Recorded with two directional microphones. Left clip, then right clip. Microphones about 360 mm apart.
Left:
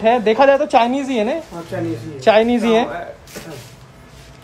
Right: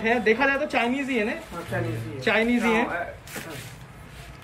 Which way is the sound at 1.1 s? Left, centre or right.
Left.